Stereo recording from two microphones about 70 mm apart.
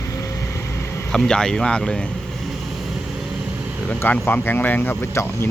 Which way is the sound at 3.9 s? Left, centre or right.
Left.